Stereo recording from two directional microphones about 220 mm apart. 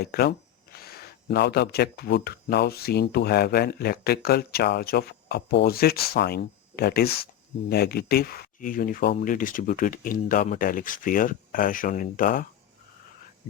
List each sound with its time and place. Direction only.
0.0 s speech: 45° left (ahead or behind)